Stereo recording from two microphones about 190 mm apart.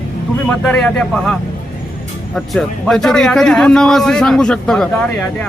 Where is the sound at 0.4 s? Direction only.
5° left (ahead or behind).